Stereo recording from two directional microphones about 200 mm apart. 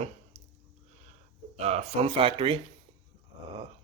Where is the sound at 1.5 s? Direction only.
30° right (ahead or behind).